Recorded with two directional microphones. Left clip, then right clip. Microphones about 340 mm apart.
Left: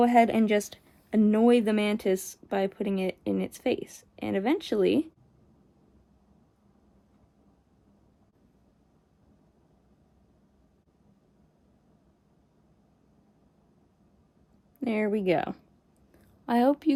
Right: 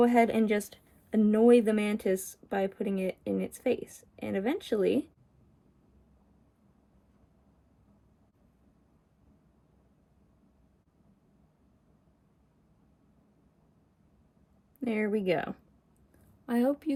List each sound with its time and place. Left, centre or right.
0.1 s speech: left
14.8 s speech: centre